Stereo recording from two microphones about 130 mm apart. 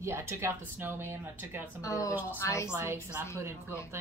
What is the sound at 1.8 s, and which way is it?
Speech, 25° left (ahead or behind).